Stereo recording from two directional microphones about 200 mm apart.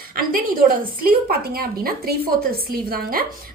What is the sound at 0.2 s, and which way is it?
A woman's voice, 45° right (ahead or behind).